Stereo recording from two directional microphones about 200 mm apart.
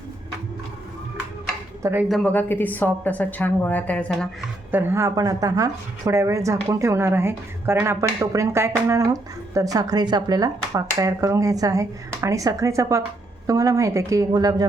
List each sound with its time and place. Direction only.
1.8 s speech: 10° right (ahead or behind)
2.0 s a woman's voice: 5° left (ahead or behind)
4.7 s speech: 10° right (ahead or behind)